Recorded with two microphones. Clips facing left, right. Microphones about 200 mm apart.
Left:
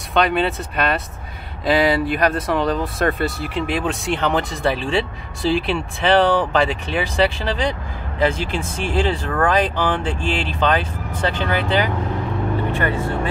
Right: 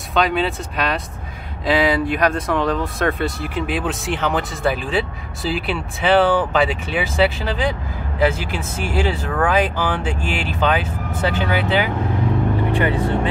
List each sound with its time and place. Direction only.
0.1 s speech: centre (ahead or behind); by 13.3 s 15° right (ahead or behind)